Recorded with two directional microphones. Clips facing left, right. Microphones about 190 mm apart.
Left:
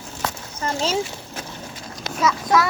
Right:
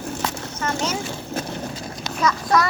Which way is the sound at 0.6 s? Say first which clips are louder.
Left 1 dB; 30° left (ahead or behind).